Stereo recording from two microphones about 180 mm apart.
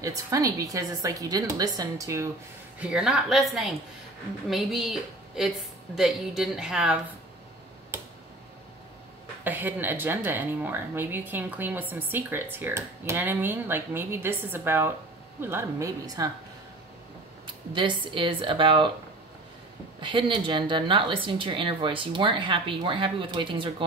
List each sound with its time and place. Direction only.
0.0 s speech: 20° right (ahead or behind)
2.8 s a woman's voice: 5° right (ahead or behind)
9.4 s speech: 10° right (ahead or behind)
17.7 s speech: 25° right (ahead or behind)
20.0 s speech: 25° right (ahead or behind)